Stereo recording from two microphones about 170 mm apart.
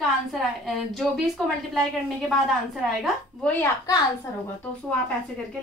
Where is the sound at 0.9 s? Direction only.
Centre (ahead or behind).